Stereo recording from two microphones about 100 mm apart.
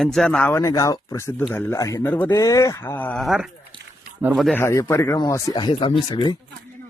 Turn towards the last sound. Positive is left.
turn(degrees=50)  # may be behind; listen again after turning